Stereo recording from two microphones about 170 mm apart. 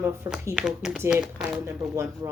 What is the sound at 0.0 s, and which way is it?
Speech, 15° right (ahead or behind).